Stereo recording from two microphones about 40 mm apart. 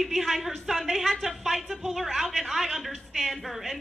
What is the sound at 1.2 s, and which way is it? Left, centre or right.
A woman's voice, centre.